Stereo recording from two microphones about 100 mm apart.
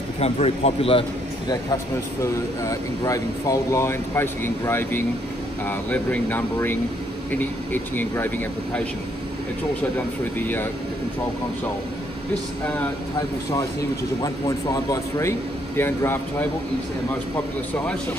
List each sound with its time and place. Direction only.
0.2 s a man's voice: 80° left
2.6 s speech: 35° left (ahead or behind); by 8.3 s 20° left (ahead or behind)
9.9 s speech: 20° left (ahead or behind)
12.6 s speech: 15° left (ahead or behind)
14.2 s speech: 35° left (ahead or behind)